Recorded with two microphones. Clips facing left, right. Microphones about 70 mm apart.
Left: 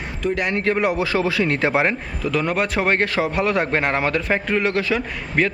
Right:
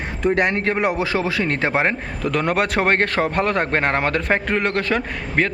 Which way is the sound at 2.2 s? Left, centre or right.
Right.